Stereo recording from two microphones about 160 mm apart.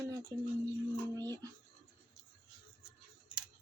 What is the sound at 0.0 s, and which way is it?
Speech, 20° right (ahead or behind).